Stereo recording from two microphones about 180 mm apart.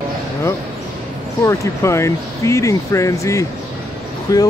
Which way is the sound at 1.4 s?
15° left (ahead or behind).